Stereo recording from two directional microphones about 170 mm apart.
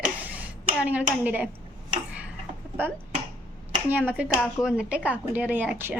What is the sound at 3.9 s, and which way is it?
Speech, 10° right (ahead or behind).